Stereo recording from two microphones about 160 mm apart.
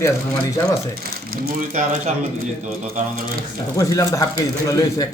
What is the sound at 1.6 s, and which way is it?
Speech, 50° right (ahead or behind).